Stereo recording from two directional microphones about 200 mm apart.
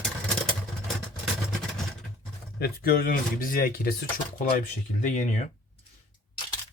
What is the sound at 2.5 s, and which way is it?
Speech, 50° left (ahead or behind).